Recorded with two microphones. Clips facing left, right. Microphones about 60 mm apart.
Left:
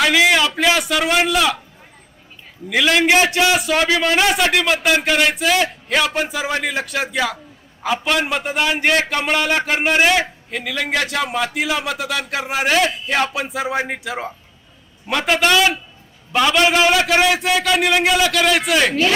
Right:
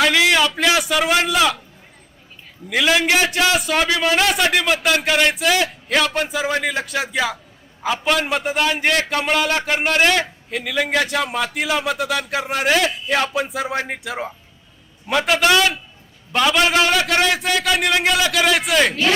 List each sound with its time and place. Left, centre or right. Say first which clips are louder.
0.3 s a man's voice: left 1 dB; centre
2.6 s a man's voice: left 1 dB; centre
3.0 s a man's voice: left 3 dB; left
3.2 s a man's voice: left 2 dB; centre